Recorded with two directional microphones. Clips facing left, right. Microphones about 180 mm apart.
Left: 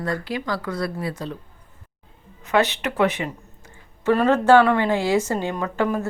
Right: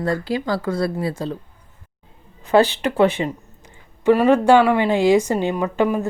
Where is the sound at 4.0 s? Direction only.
15° right (ahead or behind).